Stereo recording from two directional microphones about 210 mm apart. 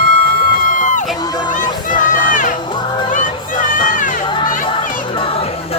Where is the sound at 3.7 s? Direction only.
40° left (ahead or behind).